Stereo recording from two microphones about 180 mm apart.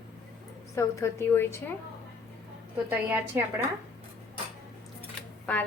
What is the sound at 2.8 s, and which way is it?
Speech, 10° right (ahead or behind).